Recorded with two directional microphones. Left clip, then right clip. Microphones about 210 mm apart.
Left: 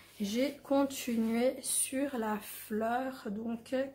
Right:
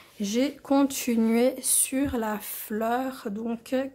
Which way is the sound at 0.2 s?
45° right (ahead or behind).